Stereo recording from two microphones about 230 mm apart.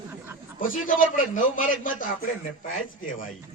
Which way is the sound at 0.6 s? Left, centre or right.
Left.